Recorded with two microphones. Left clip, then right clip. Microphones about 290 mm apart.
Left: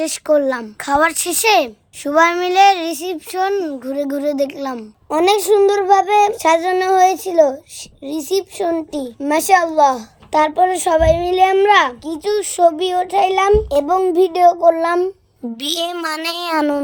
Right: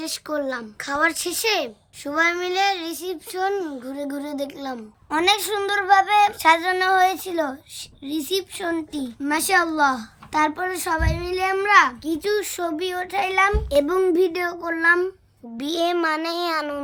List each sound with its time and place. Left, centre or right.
0.0 s a child's voice: centre
15.6 s speech: left